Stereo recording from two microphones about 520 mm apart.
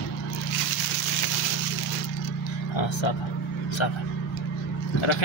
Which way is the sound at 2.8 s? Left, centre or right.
Left.